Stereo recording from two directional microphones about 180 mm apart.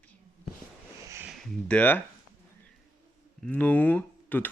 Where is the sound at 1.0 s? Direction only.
15° right (ahead or behind).